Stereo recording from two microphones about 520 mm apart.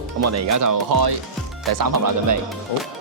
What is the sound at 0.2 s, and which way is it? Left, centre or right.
Speech, right.